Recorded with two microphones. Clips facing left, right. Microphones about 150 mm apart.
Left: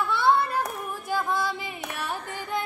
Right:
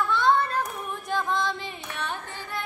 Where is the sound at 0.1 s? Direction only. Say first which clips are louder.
Left 1 dB; 10° left (ahead or behind).